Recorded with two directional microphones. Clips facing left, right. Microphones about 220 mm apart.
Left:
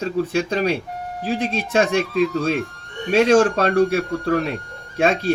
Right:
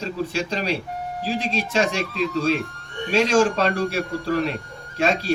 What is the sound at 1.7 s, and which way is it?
Speech, 55° left (ahead or behind).